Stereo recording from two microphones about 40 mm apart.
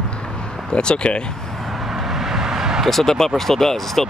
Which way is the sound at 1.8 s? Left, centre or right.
Centre.